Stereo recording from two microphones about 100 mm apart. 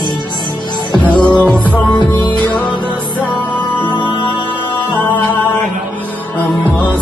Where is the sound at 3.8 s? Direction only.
55° left (ahead or behind).